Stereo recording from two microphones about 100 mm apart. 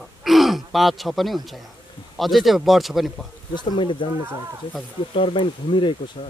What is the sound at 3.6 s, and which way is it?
Speech, 55° left (ahead or behind).